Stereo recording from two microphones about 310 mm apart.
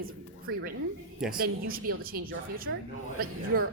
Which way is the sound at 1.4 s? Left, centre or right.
Right.